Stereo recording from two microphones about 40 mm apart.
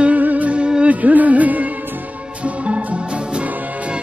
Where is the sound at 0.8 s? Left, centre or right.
Right.